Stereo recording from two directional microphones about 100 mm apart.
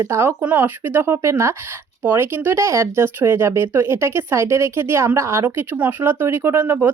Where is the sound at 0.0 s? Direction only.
25° right (ahead or behind).